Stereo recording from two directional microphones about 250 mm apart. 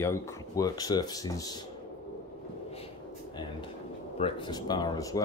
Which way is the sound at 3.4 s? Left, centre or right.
Centre.